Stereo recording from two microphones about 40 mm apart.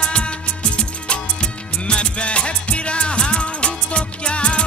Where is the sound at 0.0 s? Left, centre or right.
Left.